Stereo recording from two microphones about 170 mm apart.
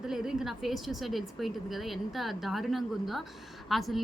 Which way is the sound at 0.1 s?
5° right (ahead or behind).